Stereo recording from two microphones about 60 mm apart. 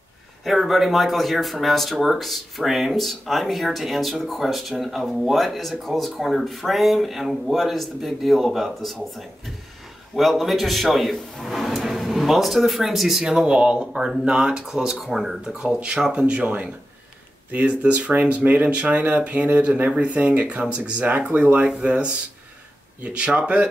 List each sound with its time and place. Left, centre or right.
0.4 s speech: centre